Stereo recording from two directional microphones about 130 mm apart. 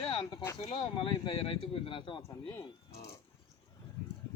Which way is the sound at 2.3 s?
30° left (ahead or behind).